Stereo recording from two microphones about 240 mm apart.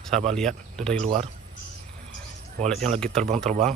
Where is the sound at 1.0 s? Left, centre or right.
Right.